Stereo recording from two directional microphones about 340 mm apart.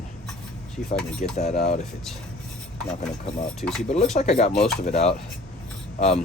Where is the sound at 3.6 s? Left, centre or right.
Centre.